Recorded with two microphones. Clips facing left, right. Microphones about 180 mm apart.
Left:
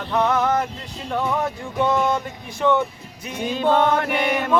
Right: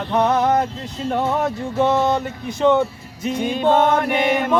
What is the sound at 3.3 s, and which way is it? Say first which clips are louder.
Music: right 3 dB; 20° right (ahead or behind).